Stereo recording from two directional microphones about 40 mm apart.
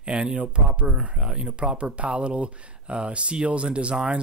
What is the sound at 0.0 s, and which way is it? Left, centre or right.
Speech, right.